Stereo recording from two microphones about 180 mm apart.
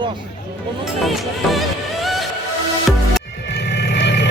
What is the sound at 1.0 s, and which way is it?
Speech, centre (ahead or behind).